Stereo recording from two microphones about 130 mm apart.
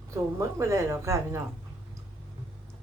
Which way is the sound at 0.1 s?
20° right (ahead or behind).